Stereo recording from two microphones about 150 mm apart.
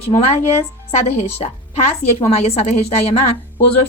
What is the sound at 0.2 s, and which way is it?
A woman's voice, 45° left (ahead or behind).